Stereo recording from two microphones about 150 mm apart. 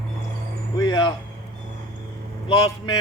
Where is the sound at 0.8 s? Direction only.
25° left (ahead or behind).